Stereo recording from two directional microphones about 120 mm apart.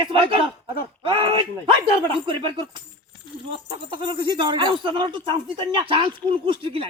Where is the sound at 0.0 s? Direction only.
45° right (ahead or behind).